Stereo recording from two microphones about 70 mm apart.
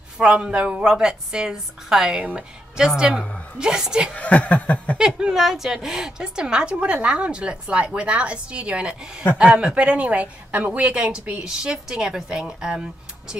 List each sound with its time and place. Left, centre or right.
0.2 s a woman's voice: centre
4.1 s chuckle: centre
4.9 s a woman's voice: centre